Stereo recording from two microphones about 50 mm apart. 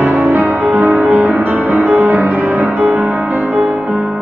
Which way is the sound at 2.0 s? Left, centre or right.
Right.